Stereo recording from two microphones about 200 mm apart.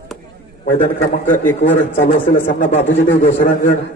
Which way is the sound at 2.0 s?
40° left (ahead or behind).